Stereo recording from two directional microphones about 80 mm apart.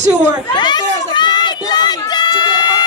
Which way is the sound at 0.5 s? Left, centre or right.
Left.